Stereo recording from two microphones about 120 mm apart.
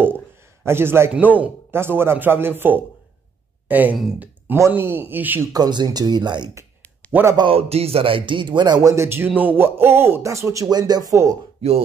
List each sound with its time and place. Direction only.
0.7 s speech: 20° right (ahead or behind)
3.6 s speech: 15° right (ahead or behind)
4.5 s speech: 20° right (ahead or behind)
5.5 s speech: 35° right (ahead or behind)
7.1 s a man's voice: 15° right (ahead or behind)
7.3 s speech: 50° right (ahead or behind); by 11.3 s 30° right (ahead or behind)